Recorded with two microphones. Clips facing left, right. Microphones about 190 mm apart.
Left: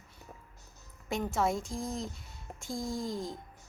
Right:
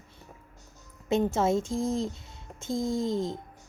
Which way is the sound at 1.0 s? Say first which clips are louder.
Right 6 dB; 25° right (ahead or behind).